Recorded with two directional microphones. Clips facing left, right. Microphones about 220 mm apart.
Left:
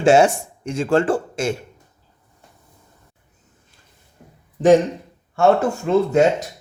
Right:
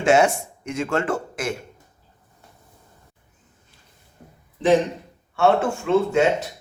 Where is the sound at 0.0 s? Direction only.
30° left (ahead or behind).